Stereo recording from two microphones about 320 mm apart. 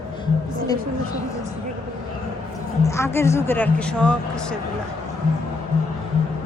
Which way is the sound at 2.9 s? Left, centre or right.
Centre.